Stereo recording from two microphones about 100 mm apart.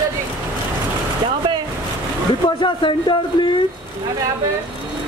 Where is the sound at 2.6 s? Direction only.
55° left (ahead or behind).